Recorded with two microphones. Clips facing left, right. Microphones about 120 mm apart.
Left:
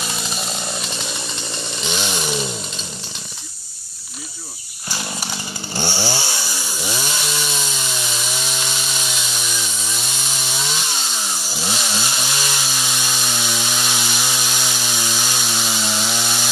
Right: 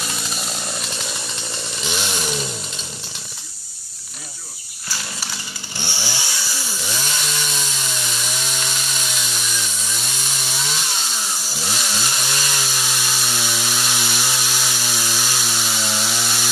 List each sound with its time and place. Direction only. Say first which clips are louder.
0.2 s chainsaw: left 2 dB; centre (ahead or behind)
4.8 s chainsaw: left 4 dB; 20° left (ahead or behind)
5.8 s chainsaw: left 7 dB; 40° left (ahead or behind)
6.8 s chainsaw: left 3 dB; 10° left (ahead or behind)
11.6 s chainsaw: left 2 dB; centre (ahead or behind)